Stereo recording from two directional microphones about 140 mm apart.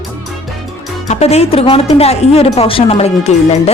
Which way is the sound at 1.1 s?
50° left (ahead or behind).